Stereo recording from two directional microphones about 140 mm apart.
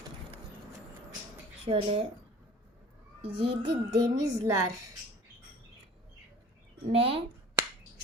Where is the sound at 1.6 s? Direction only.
45° right (ahead or behind).